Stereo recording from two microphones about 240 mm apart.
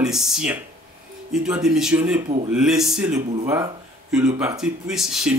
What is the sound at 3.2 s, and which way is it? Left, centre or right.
Speech, right.